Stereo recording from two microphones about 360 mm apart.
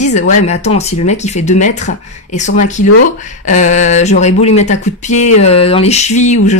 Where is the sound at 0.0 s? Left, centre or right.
Centre.